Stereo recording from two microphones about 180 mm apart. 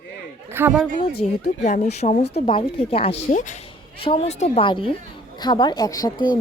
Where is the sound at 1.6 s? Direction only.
40° left (ahead or behind).